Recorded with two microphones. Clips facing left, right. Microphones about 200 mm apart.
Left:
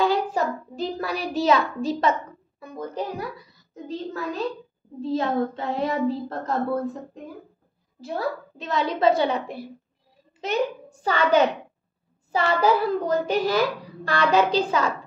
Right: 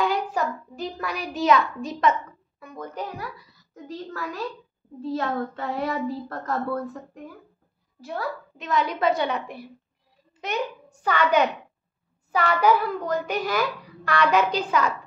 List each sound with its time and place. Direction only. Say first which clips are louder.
0.0 s child singing: left 3 dB; 30° left (ahead or behind)
2.6 s a child's voice: left 3 dB; 30° left (ahead or behind)
8.0 s a child's voice: left 3 dB; 30° left (ahead or behind)
11.0 s a child's voice: left 2 dB; 30° left (ahead or behind)